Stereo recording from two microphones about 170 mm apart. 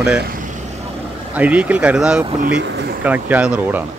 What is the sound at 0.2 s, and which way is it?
Vehicle, 55° right (ahead or behind).